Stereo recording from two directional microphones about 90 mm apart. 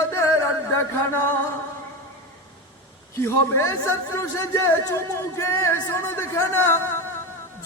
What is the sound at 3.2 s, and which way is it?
Speech, 35° left (ahead or behind).